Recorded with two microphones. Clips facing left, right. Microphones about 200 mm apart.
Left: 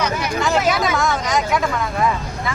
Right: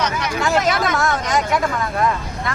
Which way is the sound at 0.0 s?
5° left (ahead or behind).